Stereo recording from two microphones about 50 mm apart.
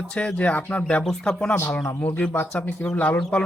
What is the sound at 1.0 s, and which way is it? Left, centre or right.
Speech, centre.